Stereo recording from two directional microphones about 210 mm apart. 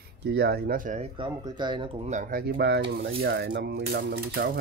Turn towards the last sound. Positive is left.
turn(degrees=-50)  # may be behind; listen again after turning